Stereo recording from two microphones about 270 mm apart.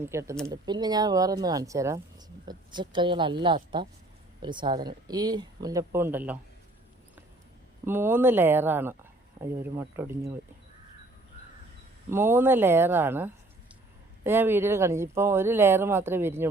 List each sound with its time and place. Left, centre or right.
0.0 s speech: centre
7.9 s speech: centre
12.1 s speech: centre